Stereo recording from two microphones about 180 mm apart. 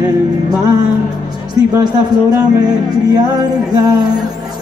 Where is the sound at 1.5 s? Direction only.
25° right (ahead or behind).